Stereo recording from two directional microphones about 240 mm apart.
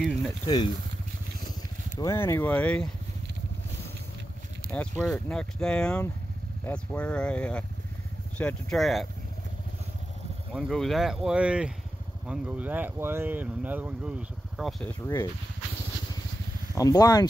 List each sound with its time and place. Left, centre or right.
0.0 s speech: centre
2.0 s speech: centre
4.7 s speech: centre
10.5 s speech: centre
16.7 s speech: centre